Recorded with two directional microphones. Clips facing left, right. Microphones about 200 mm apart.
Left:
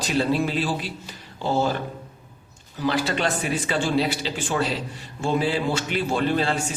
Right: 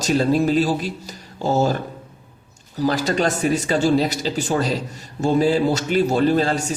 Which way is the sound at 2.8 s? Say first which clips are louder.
Right 4 dB; 40° right (ahead or behind).